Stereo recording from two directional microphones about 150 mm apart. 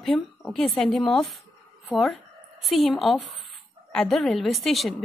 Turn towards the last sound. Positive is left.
turn(degrees=0)  # may be behind; listen again after turning